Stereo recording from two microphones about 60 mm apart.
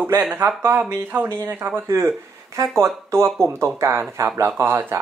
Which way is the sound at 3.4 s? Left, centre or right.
Right.